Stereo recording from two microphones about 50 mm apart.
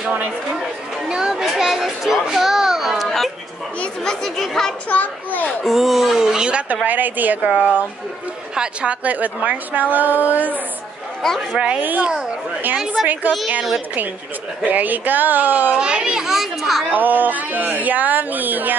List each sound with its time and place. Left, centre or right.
1.0 s children playing: centre
4.0 s speech: centre
4.8 s a child's voice: left
5.5 s speech: centre
6.7 s speech: right
11.8 s speech: right
14.6 s speech: right
15.8 s speech: centre
16.9 s speech: right